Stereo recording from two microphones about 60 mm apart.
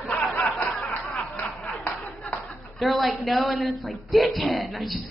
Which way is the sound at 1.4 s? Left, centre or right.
Left.